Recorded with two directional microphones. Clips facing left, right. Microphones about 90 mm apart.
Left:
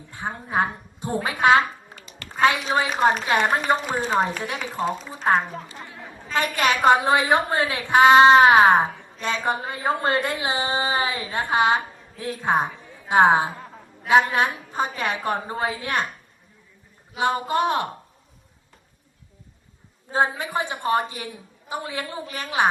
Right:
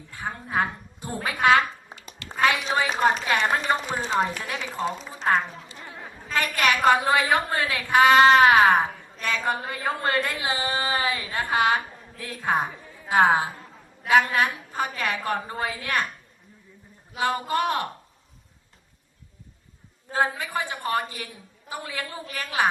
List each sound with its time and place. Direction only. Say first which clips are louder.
0.1 s a woman's voice: left 2 dB; 25° left (ahead or behind)
2.2 s a sound: right 1 dB; 50° left (ahead or behind)
2.7 s a woman's voice: left 2 dB; 20° left (ahead or behind)
17.2 s a woman's voice: left 3 dB; 20° left (ahead or behind)
20.1 s a woman's voice: left 3 dB; 20° left (ahead or behind)